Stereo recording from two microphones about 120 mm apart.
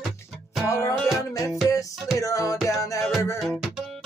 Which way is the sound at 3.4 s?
Centre (ahead or behind).